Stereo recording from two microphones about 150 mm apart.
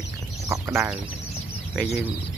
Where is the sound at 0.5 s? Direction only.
15° right (ahead or behind).